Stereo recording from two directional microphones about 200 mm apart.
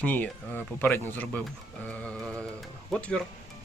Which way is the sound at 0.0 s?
10° left (ahead or behind).